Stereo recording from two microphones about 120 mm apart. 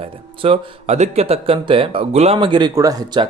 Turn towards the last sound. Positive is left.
turn(degrees=-30)  # may be behind; listen again after turning